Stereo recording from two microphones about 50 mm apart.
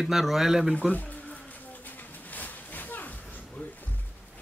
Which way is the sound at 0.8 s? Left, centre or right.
Left.